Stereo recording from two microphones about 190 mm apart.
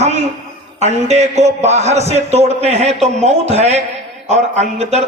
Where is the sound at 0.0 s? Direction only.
35° right (ahead or behind).